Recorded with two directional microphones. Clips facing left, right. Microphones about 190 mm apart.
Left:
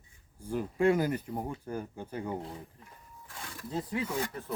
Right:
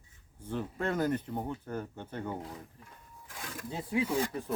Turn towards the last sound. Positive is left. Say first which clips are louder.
# right 3 dB
turn(degrees=-10)  # may be behind; listen again after turning